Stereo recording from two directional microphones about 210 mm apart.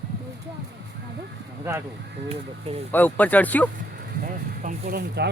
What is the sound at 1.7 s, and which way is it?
Speech, 10° right (ahead or behind).